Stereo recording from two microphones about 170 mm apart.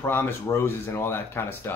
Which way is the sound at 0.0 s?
15° left (ahead or behind).